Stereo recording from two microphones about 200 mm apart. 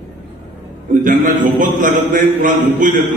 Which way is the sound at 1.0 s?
40° right (ahead or behind).